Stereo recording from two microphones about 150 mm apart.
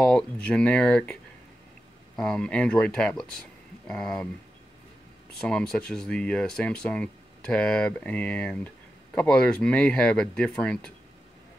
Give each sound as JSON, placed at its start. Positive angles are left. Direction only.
{"t": 0.0, "sound": "speech", "side_deg": 5}
{"t": 2.1, "sound": "speech", "side_deg": 5}
{"t": 5.4, "sound": "speech", "side_deg": 5}